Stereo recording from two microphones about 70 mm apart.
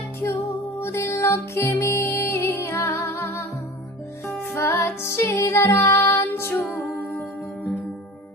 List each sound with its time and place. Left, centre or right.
0.2 s music: left
4.5 s music: left